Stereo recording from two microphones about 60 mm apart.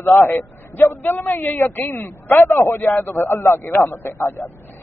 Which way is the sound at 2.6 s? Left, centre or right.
Left.